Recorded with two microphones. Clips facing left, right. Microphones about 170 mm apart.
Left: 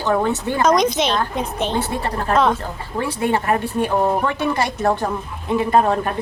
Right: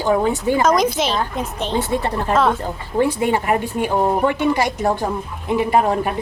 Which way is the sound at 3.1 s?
15° right (ahead or behind).